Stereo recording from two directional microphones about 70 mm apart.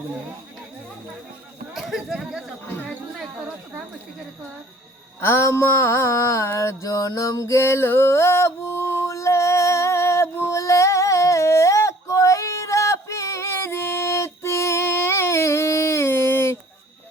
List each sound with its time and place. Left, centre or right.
1.7 s speech: centre
5.2 s mantra: left